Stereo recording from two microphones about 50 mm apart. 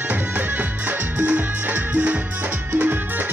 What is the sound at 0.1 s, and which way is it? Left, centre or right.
Music, right.